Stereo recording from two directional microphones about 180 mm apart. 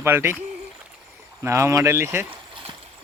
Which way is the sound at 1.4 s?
15° right (ahead or behind).